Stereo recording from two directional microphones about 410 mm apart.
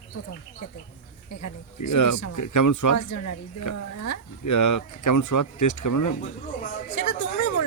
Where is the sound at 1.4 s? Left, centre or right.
Left.